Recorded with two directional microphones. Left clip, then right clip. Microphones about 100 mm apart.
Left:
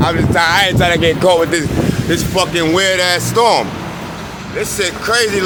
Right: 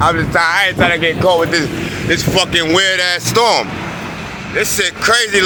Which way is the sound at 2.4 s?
Centre (ahead or behind).